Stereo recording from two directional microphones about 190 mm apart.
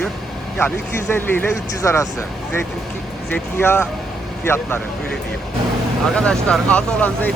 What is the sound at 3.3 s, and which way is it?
Speech, 10° left (ahead or behind).